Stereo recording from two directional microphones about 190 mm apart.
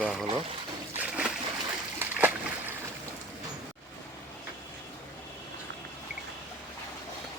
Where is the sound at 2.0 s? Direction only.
10° right (ahead or behind).